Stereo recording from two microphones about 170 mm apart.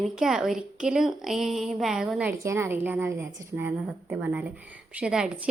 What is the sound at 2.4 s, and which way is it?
A woman's voice, 15° right (ahead or behind).